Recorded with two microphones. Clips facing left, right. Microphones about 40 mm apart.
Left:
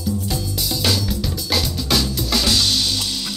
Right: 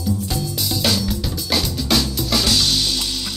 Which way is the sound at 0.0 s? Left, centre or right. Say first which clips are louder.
Right 1 dB; centre.